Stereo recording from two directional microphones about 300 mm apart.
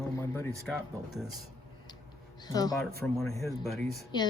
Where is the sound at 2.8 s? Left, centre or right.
Centre.